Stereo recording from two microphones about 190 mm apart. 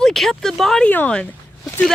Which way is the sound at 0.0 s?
Centre (ahead or behind).